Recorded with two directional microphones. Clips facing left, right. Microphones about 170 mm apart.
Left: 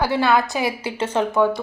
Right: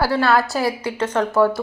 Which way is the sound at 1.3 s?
5° right (ahead or behind).